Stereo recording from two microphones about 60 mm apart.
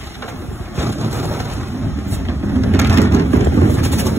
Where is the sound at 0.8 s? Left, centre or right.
Right.